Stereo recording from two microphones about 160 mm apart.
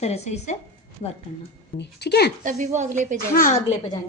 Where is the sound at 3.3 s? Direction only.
60° left (ahead or behind).